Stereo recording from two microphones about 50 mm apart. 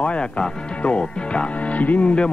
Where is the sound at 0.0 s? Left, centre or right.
Left.